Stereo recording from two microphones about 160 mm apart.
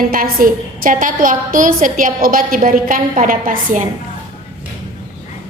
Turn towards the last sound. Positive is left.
turn(degrees=-55)  # may be behind; listen again after turning